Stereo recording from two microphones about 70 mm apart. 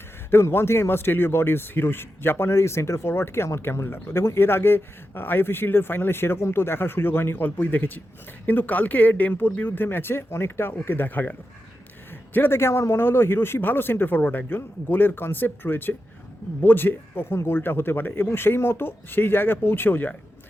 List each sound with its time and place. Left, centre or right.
0.4 s a man's voice: left